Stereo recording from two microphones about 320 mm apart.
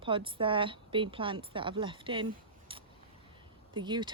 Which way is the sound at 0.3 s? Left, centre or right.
Centre.